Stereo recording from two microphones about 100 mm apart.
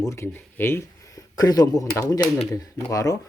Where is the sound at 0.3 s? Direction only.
20° left (ahead or behind).